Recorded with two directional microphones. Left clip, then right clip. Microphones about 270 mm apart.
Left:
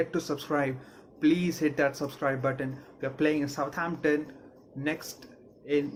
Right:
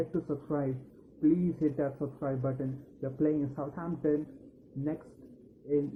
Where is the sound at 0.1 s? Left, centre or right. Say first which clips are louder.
Left 4 dB; left.